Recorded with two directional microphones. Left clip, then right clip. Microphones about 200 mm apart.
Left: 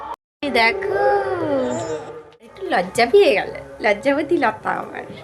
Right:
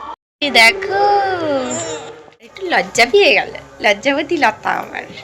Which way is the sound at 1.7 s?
15° left (ahead or behind).